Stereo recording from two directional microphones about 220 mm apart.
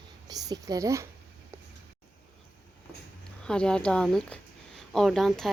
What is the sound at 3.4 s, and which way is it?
Speech, 5° left (ahead or behind).